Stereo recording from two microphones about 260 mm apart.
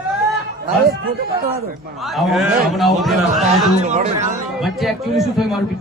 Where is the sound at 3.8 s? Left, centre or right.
Right.